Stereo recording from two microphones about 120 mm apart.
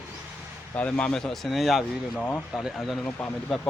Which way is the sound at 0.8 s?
10° left (ahead or behind).